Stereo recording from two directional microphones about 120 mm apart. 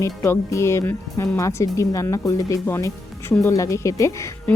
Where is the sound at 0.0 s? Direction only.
25° left (ahead or behind).